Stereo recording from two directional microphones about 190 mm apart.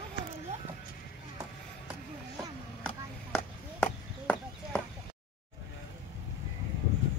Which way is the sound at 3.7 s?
5° left (ahead or behind).